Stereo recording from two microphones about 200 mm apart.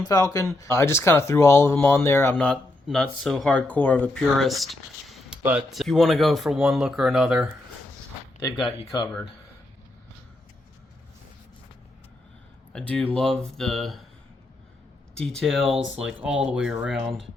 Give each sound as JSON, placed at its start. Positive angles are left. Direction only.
{"t": 0.0, "sound": "speech", "side_deg": 20}
{"t": 8.4, "sound": "speech", "side_deg": 20}
{"t": 12.7, "sound": "speech", "side_deg": 5}
{"t": 15.1, "sound": "speech", "side_deg": 0}